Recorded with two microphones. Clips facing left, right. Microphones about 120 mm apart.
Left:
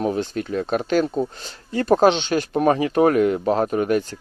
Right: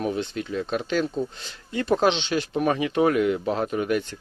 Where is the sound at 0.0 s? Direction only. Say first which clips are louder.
Left 4 dB; 40° left (ahead or behind).